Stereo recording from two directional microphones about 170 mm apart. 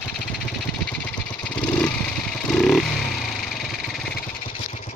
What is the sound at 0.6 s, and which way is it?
Vehicle, 5° left (ahead or behind).